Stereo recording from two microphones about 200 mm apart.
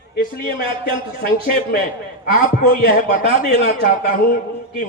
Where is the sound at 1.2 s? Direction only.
45° left (ahead or behind).